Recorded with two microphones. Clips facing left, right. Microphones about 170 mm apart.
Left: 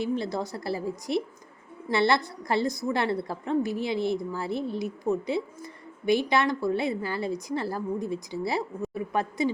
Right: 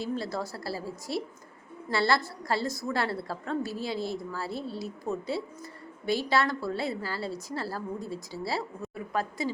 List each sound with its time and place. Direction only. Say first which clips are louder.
0.0 s a woman's voice: left 4 dB; 20° left (ahead or behind)